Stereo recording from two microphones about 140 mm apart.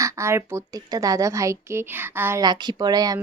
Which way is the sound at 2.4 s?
30° right (ahead or behind).